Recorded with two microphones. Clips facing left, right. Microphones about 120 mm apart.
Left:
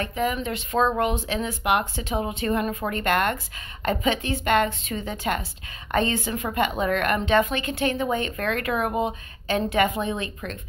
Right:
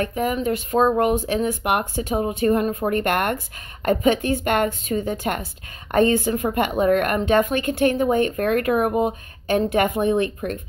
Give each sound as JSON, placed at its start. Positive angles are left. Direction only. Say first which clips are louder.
{"t": 0.0, "sound": "a woman's voice", "louder": "right 4 dB", "side_deg": -45}
{"t": 2.9, "sound": "a woman's voice", "louder": "even", "side_deg": -50}